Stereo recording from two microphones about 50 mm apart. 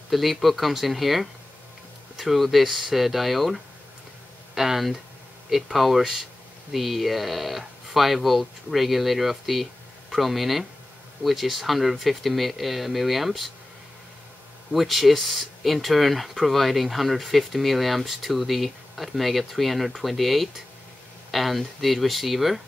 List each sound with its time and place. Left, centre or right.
0.1 s speech: centre
14.7 s speech: centre